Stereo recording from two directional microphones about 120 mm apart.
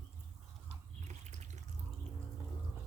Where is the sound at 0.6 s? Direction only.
80° right.